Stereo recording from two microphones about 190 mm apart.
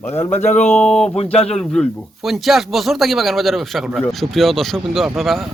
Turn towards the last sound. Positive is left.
turn(degrees=0)  # may be behind; listen again after turning